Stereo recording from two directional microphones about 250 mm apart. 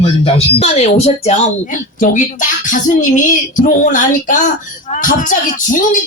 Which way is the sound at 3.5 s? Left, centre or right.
Left.